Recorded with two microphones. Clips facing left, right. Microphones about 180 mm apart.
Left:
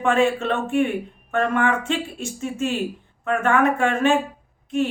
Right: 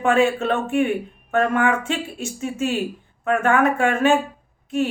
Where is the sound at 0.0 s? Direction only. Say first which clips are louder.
Right 1 dB; 5° right (ahead or behind).